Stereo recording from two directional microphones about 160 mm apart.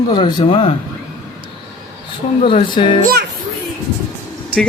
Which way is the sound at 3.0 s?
85° right.